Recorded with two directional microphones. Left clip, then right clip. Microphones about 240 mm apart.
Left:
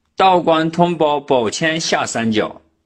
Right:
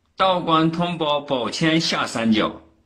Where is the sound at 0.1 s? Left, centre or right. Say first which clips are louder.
Left 6 dB; left.